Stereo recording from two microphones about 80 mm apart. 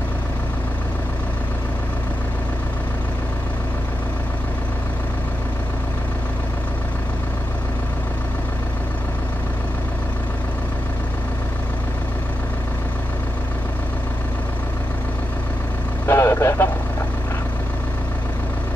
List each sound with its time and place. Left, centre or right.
16.1 s vehicle: left